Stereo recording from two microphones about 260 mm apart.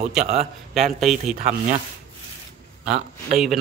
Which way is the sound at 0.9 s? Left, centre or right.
Centre.